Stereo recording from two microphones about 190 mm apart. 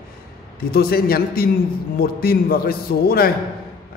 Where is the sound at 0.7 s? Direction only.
55° left (ahead or behind).